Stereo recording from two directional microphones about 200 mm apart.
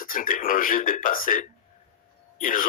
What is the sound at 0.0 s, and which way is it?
Speech, 45° left (ahead or behind).